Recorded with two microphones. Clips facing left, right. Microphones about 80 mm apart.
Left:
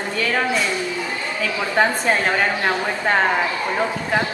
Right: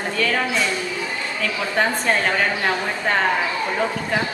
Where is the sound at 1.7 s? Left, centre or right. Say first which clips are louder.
Left 2 dB; centre.